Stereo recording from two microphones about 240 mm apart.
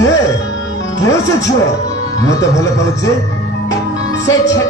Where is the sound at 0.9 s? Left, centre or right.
Centre.